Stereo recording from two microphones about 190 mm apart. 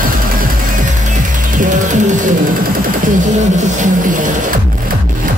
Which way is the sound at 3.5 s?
40° right (ahead or behind).